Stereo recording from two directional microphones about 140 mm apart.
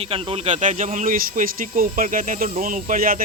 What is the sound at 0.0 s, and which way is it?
Speech, 40° right (ahead or behind).